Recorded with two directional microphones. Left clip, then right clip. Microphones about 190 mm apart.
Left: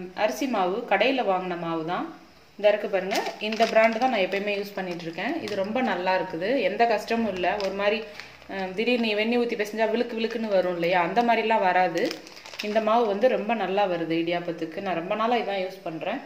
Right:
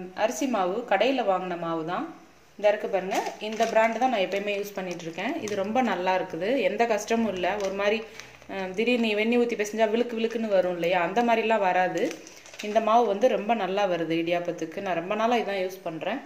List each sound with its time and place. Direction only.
0.2 s a woman's voice: 10° right (ahead or behind)